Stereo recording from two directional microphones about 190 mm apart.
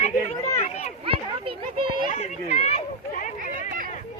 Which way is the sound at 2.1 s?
35° left (ahead or behind).